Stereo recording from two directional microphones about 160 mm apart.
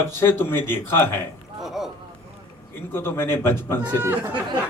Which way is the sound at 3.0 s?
15° left (ahead or behind).